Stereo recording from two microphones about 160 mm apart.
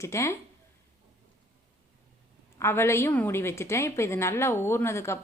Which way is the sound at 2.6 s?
15° left (ahead or behind).